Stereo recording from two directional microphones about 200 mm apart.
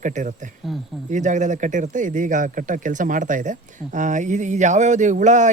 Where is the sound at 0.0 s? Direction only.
40° right (ahead or behind).